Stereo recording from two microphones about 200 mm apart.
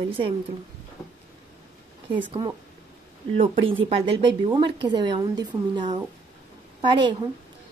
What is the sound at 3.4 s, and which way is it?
A woman's voice, 30° right (ahead or behind).